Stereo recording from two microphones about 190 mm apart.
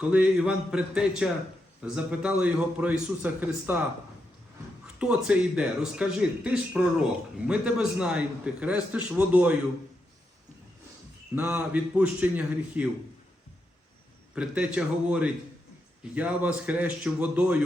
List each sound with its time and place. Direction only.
0.0 s a man's voice: 5° right (ahead or behind)
4.9 s a man's voice: 5° right (ahead or behind)
11.3 s a man's voice: 5° right (ahead or behind)
14.3 s a man's voice: 5° right (ahead or behind)